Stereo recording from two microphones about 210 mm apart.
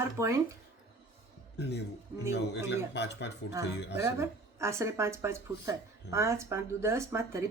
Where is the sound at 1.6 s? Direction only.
50° left (ahead or behind).